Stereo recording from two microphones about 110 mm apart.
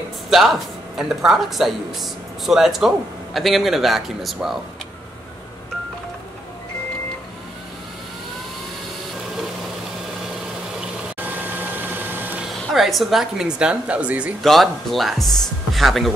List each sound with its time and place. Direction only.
0.3 s speech: centre (ahead or behind)
11.2 s vacuum cleaner: 15° right (ahead or behind)
12.4 s speech: centre (ahead or behind)
14.4 s speech: centre (ahead or behind)